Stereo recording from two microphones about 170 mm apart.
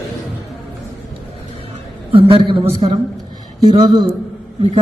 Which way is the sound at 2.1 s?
30° right (ahead or behind).